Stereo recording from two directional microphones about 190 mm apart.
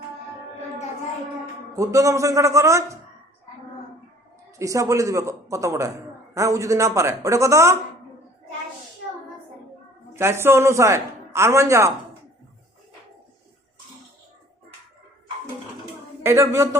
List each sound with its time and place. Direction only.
1.7 s a man's voice: 15° right (ahead or behind)
4.5 s a man's voice: 15° right (ahead or behind)
10.2 s a man's voice: 15° right (ahead or behind)
16.2 s a man's voice: 15° right (ahead or behind)